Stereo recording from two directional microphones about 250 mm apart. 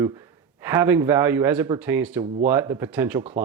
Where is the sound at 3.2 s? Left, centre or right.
Right.